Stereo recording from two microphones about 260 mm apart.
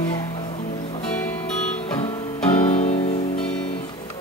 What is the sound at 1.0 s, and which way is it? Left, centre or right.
Music, centre.